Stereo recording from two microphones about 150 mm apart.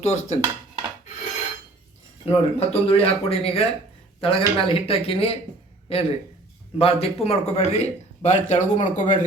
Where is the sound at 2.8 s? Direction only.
40° left (ahead or behind).